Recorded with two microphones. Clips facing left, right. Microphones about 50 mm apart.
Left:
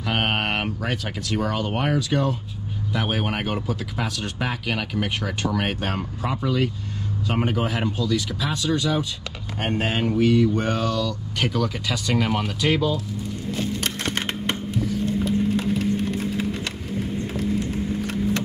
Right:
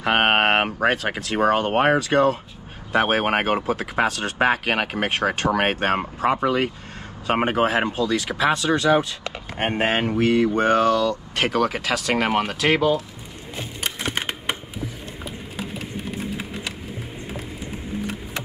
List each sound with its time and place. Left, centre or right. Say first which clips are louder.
0.0 s speech: right 6 dB; right
9.6 s speech: right 3 dB; right
11.3 s speech: right 2 dB; right
12.3 s speech: right 3 dB; right
13.5 s computer keyboard: left 3 dB; centre